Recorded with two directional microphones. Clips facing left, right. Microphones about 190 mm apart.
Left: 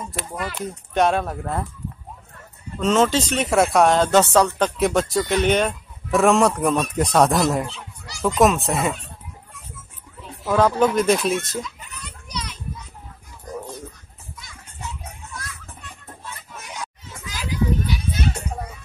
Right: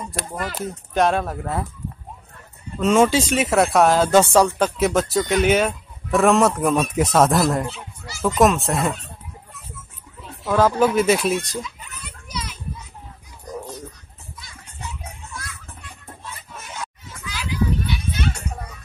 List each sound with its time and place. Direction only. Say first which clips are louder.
0.9 s speech: even; centre (ahead or behind)
2.8 s speech: right 2 dB; 10° right (ahead or behind)
10.4 s speech: even; centre (ahead or behind)
12.3 s children playing: even; 5° right (ahead or behind)
17.3 s children playing: even; 40° left (ahead or behind)